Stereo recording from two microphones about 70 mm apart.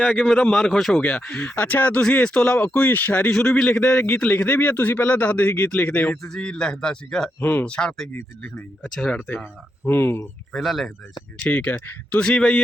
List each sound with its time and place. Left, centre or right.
0.0 s a man's voice: centre
0.5 s speech: centre
1.4 s a man's voice: centre
2.7 s a man's voice: left
3.2 s a man's voice: centre
6.2 s a man's voice: centre
9.8 s speech: left
10.5 s speech: centre
11.3 s a man's voice: centre
12.2 s a man's voice: centre